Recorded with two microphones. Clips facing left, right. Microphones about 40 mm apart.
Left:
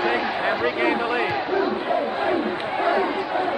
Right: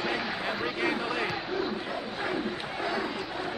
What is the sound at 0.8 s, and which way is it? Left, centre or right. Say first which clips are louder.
Speech: left 8 dB; left.